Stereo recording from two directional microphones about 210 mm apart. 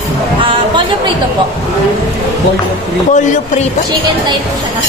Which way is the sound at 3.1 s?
35° left (ahead or behind).